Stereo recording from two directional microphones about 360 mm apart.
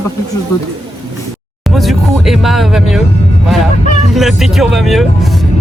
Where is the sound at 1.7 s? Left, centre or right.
Centre.